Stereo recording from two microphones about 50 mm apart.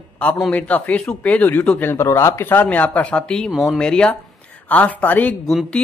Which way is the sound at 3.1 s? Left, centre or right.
Centre.